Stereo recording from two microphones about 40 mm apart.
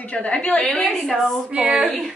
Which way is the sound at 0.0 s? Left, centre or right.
Left.